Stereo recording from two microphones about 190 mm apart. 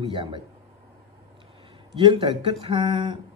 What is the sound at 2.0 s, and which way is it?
Speech, 25° right (ahead or behind).